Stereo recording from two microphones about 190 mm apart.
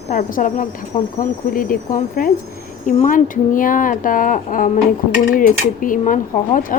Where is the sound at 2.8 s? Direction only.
40° left (ahead or behind).